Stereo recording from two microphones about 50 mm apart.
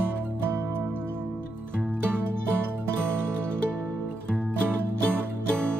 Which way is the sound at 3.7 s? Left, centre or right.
Right.